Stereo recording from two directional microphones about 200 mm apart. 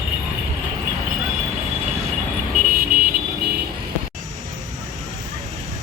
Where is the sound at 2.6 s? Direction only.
45° right (ahead or behind).